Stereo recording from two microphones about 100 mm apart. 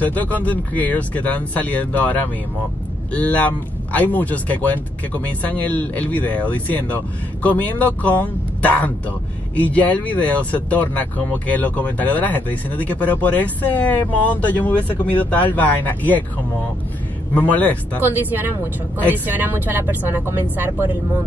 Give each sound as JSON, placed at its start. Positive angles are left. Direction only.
{"t": 0.0, "sound": "speech", "side_deg": 15}
{"t": 17.3, "sound": "speech", "side_deg": 15}
{"t": 18.0, "sound": "speech", "side_deg": -20}